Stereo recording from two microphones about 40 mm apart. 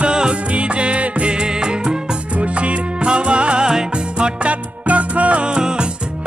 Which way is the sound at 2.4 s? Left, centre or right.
Right.